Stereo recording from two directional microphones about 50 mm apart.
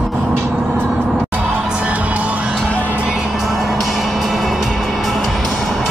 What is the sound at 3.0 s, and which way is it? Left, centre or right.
Music, centre.